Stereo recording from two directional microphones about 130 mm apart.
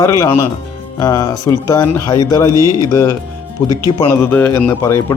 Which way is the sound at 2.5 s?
25° right (ahead or behind).